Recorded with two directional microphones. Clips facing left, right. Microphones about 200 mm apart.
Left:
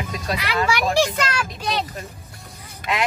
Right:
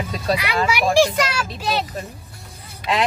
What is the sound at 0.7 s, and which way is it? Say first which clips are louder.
A child's voice: right 4 dB; 10° right (ahead or behind).